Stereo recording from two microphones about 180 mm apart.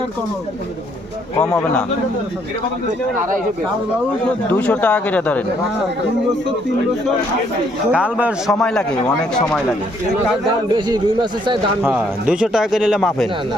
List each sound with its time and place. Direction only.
1.4 s speech: 10° left (ahead or behind)
3.2 s speech: 45° right (ahead or behind)
4.4 s speech: 10° left (ahead or behind)
7.9 s speech: 5° right (ahead or behind)
10.4 s a man's voice: 25° right (ahead or behind)
11.8 s speech: 5° right (ahead or behind)